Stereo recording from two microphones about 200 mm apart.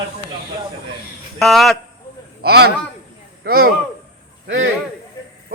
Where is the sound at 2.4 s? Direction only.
50° right (ahead or behind).